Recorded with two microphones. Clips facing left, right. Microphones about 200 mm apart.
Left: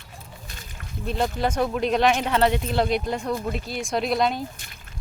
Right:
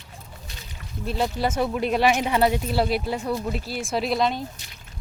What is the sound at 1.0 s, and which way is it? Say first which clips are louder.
Speech: even; 5° right (ahead or behind).